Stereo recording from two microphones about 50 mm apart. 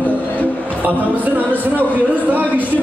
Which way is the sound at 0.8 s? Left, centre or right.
Right.